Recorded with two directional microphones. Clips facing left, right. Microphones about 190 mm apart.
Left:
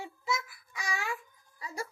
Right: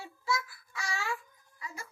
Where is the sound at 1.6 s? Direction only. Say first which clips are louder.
Left 6 dB; 35° left (ahead or behind).